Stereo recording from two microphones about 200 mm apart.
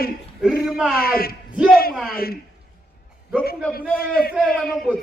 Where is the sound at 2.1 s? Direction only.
50° left (ahead or behind).